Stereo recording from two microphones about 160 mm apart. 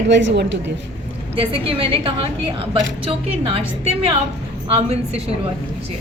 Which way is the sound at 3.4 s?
35° right (ahead or behind).